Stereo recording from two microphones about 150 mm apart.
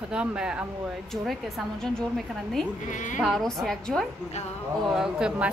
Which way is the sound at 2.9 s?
55° left (ahead or behind).